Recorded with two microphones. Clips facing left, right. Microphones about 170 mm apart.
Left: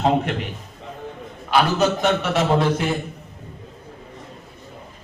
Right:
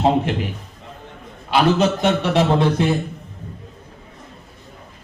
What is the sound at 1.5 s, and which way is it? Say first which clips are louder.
A man's voice: right 2 dB; 30° right (ahead or behind).